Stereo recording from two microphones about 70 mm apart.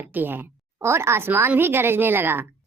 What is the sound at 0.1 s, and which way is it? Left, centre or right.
A woman's voice, right.